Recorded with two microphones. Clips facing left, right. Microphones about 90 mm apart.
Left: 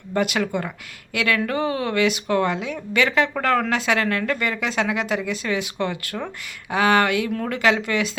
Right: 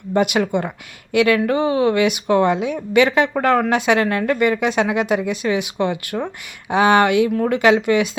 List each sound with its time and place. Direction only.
0.1 s speech: 20° right (ahead or behind)